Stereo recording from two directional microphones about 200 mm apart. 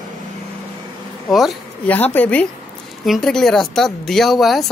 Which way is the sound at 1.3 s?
5° left (ahead or behind).